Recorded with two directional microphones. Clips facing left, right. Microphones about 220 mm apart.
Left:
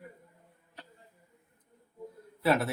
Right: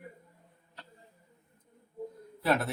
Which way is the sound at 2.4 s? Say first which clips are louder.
Left 2 dB; 5° left (ahead or behind).